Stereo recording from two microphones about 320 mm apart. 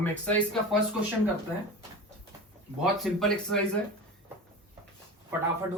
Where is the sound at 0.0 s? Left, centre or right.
Centre.